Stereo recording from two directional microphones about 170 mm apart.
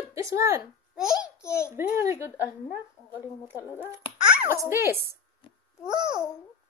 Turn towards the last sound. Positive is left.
turn(degrees=-5)  # may be behind; listen again after turning